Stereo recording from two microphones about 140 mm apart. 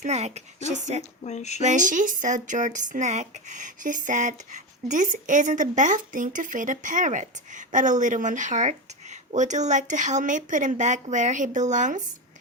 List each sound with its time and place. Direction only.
0.0 s a woman's voice: 55° right (ahead or behind)
1.2 s a sound: 55° left (ahead or behind)
1.6 s speech: 65° right (ahead or behind)